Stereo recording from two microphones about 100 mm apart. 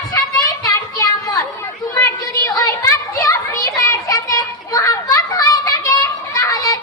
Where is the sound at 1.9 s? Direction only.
35° left (ahead or behind).